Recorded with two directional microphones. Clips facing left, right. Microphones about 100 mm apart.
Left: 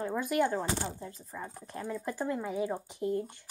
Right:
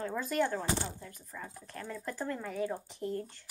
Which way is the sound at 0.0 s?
15° left (ahead or behind).